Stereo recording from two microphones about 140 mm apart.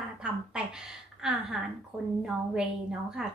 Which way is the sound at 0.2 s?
5° right (ahead or behind).